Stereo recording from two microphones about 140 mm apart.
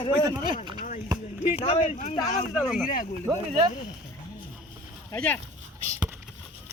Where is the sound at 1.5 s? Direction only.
40° left (ahead or behind).